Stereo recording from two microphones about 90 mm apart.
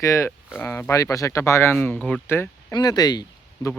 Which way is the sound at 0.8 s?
35° left (ahead or behind).